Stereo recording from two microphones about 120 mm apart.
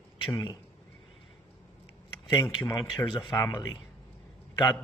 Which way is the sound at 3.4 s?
20° left (ahead or behind).